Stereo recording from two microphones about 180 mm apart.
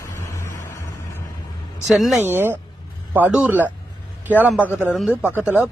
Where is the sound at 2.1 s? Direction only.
10° right (ahead or behind).